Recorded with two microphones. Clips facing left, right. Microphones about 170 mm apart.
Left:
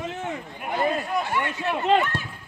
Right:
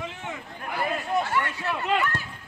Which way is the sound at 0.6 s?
20° left (ahead or behind).